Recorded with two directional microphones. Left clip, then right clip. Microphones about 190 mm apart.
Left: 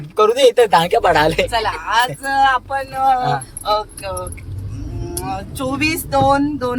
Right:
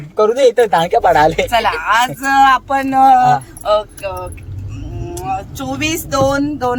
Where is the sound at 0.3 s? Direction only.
5° right (ahead or behind).